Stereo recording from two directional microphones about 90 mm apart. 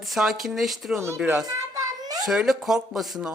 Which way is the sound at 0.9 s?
30° right (ahead or behind).